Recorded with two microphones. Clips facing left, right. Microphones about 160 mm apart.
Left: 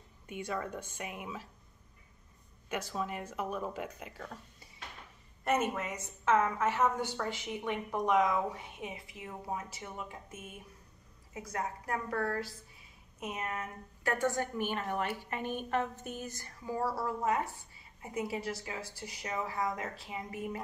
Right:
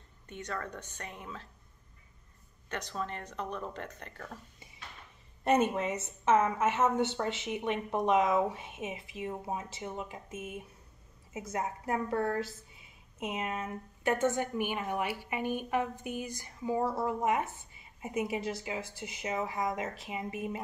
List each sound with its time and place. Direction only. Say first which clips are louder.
0.3 s speech: left 2 dB; 10° left (ahead or behind)
2.7 s speech: left 1 dB; 10° left (ahead or behind)
5.4 s a woman's voice: right 4 dB; 30° right (ahead or behind)